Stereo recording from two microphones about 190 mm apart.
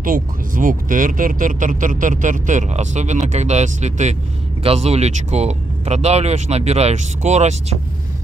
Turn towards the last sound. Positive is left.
turn(degrees=-35)  # may be behind; listen again after turning